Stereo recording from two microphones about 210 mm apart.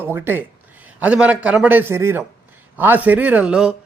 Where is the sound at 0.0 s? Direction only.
10° right (ahead or behind).